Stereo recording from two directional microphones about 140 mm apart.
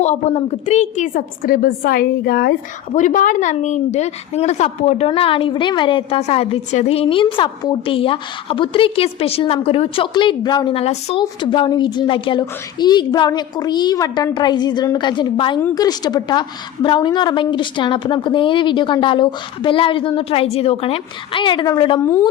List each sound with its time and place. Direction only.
0.0 s a woman's voice: 50° left (ahead or behind); by 10.8 s 30° left (ahead or behind)
10.8 s a woman's voice: 45° left (ahead or behind)